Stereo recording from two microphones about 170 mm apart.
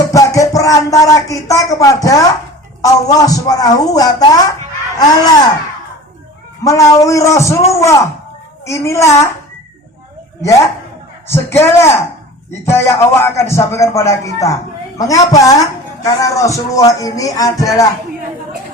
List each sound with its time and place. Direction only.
0.0 s speech: 20° left (ahead or behind)
2.8 s music: 20° left (ahead or behind)
6.7 s music: 20° left (ahead or behind)
7.7 s speech: 15° left (ahead or behind)
11.3 s speech: 15° left (ahead or behind)
16.0 s music: 20° left (ahead or behind)